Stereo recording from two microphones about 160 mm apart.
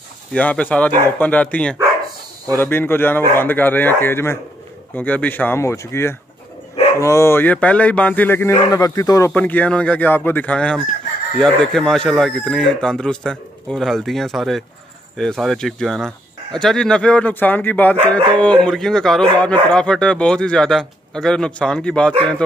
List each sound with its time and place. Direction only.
0.3 s speech: 10° left (ahead or behind)
9.3 s speech: 10° left (ahead or behind)